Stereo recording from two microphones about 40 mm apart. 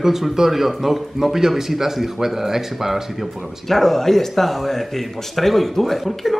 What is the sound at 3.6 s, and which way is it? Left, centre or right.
Speech, centre.